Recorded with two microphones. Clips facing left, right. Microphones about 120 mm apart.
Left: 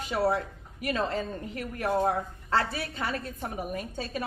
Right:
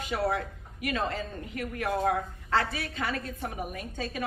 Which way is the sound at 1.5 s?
35° left (ahead or behind).